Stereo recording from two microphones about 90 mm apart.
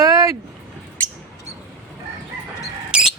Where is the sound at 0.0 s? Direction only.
40° right (ahead or behind).